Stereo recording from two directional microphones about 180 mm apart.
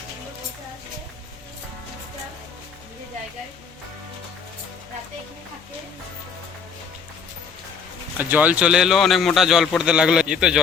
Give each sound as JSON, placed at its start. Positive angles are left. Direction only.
{"t": 8.2, "sound": "a man's voice", "side_deg": -10}